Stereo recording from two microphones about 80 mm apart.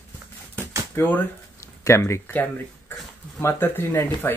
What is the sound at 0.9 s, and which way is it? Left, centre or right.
Speech, left.